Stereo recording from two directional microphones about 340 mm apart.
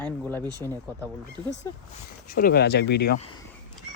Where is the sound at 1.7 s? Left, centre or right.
Centre.